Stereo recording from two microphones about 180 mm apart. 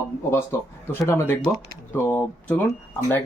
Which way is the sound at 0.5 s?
15° left (ahead or behind).